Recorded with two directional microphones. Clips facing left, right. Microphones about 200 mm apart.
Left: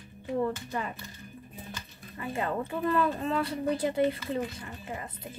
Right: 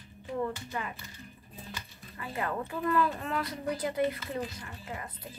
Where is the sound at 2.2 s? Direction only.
25° left (ahead or behind).